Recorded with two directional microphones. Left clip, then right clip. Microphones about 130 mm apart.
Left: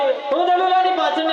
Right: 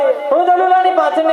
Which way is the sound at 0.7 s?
30° right (ahead or behind).